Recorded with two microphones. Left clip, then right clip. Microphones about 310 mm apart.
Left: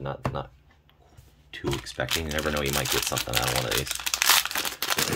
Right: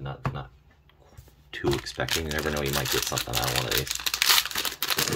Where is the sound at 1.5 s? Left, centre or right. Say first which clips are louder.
Right 2 dB; centre.